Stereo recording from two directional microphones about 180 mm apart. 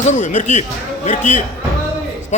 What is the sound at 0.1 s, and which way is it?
A man's voice, 45° left (ahead or behind).